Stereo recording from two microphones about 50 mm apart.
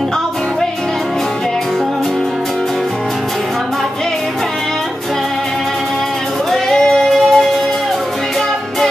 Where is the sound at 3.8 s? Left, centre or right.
Centre.